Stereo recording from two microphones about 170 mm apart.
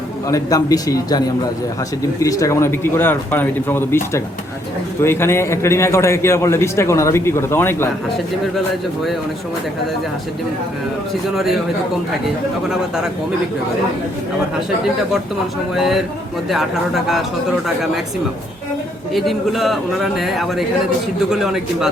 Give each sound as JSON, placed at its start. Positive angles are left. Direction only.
{"t": 0.3, "sound": "a man's voice", "side_deg": 20}
{"t": 15.7, "sound": "a man's voice", "side_deg": 0}
{"t": 19.1, "sound": "a man's voice", "side_deg": 0}